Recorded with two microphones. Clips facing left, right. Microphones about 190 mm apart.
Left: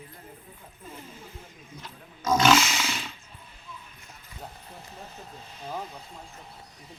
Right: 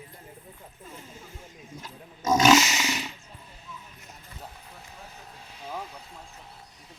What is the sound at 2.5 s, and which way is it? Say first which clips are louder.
Roar: right 3 dB; 20° right (ahead or behind).